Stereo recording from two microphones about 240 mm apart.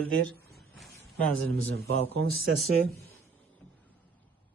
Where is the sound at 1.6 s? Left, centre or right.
Right.